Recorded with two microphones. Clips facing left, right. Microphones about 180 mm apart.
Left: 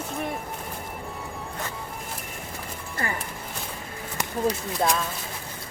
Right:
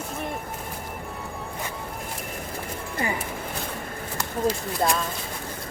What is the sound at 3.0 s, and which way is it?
Music, 15° right (ahead or behind).